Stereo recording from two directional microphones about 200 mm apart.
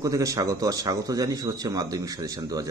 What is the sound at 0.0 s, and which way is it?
A man's voice, 15° right (ahead or behind).